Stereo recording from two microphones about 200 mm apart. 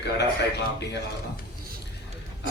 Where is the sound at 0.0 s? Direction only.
55° left (ahead or behind).